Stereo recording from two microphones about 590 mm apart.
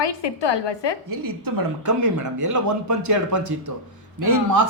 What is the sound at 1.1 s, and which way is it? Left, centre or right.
Speech, right.